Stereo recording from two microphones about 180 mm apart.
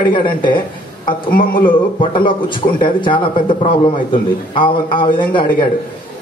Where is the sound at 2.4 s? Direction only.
25° left (ahead or behind).